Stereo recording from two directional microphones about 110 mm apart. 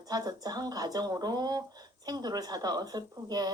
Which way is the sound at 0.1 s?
35° right (ahead or behind).